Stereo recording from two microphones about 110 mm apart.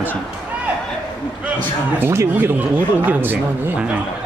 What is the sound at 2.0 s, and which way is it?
Speech, 25° right (ahead or behind).